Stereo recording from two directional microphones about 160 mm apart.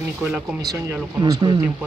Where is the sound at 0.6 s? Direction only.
25° right (ahead or behind).